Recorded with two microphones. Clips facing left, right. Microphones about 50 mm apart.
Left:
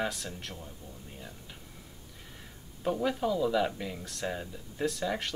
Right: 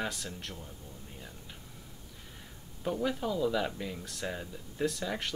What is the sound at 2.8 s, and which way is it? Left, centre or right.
Speech, centre.